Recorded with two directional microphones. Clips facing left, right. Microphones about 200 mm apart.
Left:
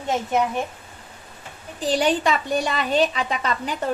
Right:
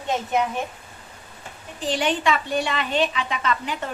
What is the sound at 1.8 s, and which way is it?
A woman's voice, 40° left (ahead or behind).